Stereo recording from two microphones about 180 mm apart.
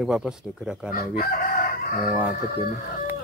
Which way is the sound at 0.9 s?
55° left (ahead or behind).